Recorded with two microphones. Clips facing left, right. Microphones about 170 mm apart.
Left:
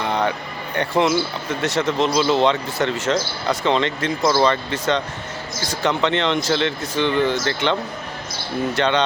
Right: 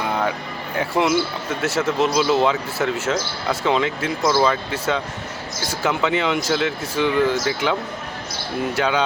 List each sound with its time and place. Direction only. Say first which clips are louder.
0.0 s speech: left 1 dB; 5° right (ahead or behind)